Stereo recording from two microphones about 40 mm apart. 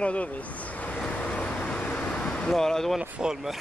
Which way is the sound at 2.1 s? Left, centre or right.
Left.